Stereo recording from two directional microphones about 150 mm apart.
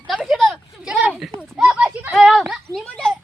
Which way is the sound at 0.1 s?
Centre (ahead or behind).